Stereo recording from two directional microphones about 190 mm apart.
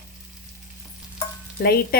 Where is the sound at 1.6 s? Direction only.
55° left (ahead or behind).